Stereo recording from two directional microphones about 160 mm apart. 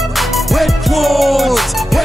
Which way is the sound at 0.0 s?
Centre (ahead or behind).